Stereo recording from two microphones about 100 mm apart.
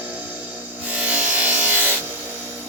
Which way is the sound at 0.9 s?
15° right (ahead or behind).